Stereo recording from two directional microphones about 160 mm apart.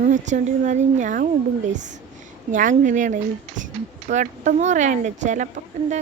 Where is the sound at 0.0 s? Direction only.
50° right (ahead or behind).